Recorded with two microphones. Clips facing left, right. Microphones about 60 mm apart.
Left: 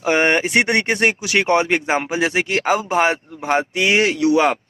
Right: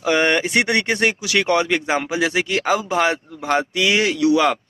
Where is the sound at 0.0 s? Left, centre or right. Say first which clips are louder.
Left 1 dB; left.